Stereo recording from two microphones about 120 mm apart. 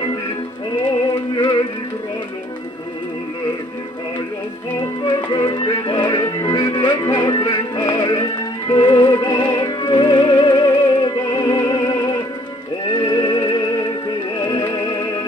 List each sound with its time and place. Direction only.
1.3 s music: 40° left (ahead or behind)
5.0 s music: 40° left (ahead or behind)